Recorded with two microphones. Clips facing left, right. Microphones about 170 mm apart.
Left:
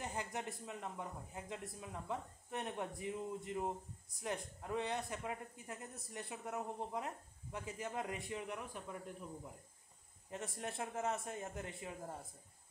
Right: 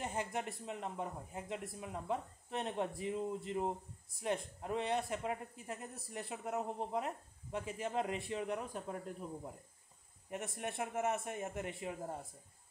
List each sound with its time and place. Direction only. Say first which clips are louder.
0.0 s a sound: right 4 dB; 20° right (ahead or behind)
0.7 s speech: right 4 dB; 20° right (ahead or behind)
10.3 s speech: right 3 dB; 20° right (ahead or behind)